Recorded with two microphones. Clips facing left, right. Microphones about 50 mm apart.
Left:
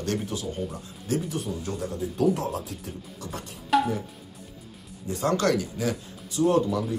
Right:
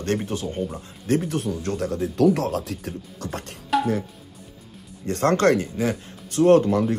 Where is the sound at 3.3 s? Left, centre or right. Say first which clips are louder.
Right 4 dB; right.